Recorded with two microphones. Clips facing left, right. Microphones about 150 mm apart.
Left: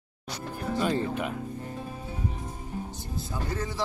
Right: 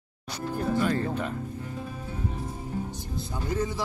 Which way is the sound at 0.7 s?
20° left (ahead or behind).